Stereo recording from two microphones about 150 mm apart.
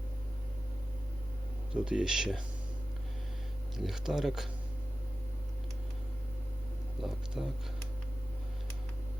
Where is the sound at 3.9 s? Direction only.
Centre (ahead or behind).